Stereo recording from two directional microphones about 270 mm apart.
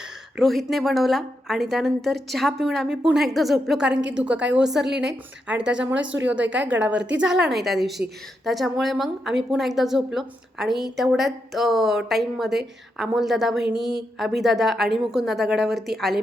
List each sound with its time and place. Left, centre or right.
0.3 s a woman's voice: centre